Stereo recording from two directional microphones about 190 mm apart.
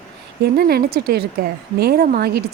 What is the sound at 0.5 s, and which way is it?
A woman's voice, 55° right (ahead or behind).